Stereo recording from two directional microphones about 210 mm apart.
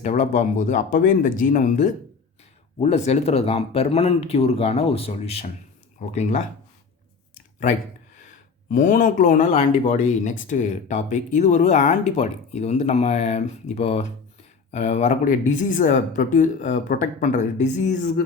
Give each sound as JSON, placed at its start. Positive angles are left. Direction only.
{"t": 0.0, "sound": "speech", "side_deg": 35}
{"t": 8.7, "sound": "speech", "side_deg": 40}